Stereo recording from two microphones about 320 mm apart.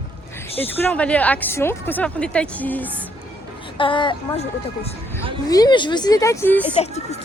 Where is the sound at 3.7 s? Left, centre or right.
Centre.